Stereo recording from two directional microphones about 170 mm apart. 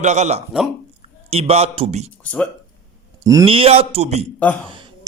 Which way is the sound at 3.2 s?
20° right (ahead or behind).